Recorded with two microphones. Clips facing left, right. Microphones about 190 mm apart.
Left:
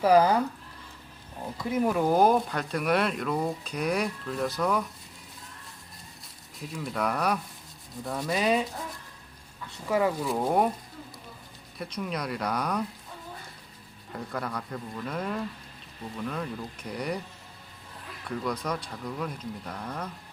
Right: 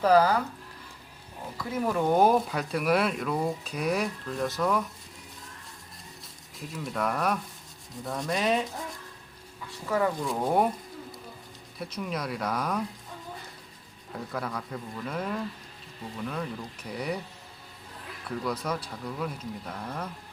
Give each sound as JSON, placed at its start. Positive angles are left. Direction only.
{"t": 0.0, "sound": "speech", "side_deg": 15}
{"t": 1.5, "sound": "speech", "side_deg": 10}
{"t": 6.7, "sound": "speech", "side_deg": 0}
{"t": 9.9, "sound": "speech", "side_deg": 10}
{"t": 11.8, "sound": "speech", "side_deg": 0}
{"t": 14.1, "sound": "speech", "side_deg": 0}
{"t": 18.3, "sound": "speech", "side_deg": -5}